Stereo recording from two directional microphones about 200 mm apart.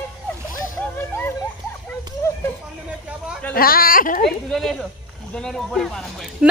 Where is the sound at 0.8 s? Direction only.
10° left (ahead or behind).